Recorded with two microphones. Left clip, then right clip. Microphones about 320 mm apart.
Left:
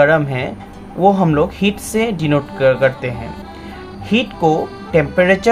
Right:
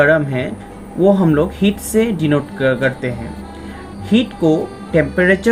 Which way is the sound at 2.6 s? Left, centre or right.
Left.